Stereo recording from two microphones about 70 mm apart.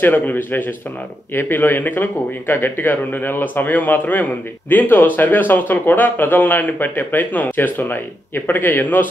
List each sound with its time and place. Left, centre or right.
0.0 s speech: left